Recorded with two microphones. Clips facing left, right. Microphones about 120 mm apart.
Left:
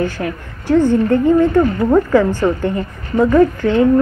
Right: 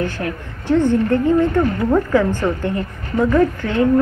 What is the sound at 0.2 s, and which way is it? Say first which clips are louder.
Speech: left 2 dB; 10° left (ahead or behind).